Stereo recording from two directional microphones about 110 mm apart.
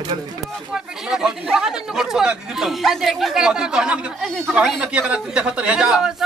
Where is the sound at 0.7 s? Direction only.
5° right (ahead or behind).